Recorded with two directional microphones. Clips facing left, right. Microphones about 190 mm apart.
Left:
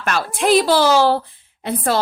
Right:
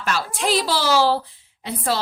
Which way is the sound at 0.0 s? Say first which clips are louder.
Left 4 dB; 55° left (ahead or behind).